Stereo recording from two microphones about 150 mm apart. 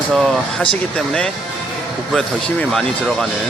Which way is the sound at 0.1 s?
Centre (ahead or behind).